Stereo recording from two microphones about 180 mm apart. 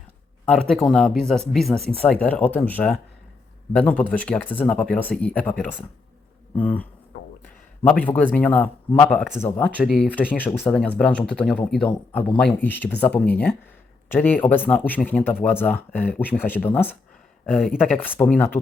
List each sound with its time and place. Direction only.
0.4 s speech: 5° left (ahead or behind)
7.9 s speech: 10° left (ahead or behind)
10.2 s speech: 10° left (ahead or behind)
18.2 s speech: 10° left (ahead or behind)